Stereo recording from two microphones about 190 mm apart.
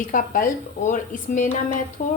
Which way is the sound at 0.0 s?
45° left (ahead or behind).